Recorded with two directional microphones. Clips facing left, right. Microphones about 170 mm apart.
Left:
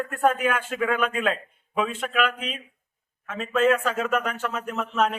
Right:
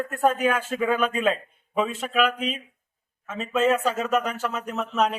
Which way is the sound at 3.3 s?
Centre (ahead or behind).